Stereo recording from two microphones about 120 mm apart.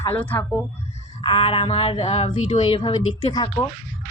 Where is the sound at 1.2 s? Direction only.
45° left (ahead or behind); by 2.3 s 65° left (ahead or behind).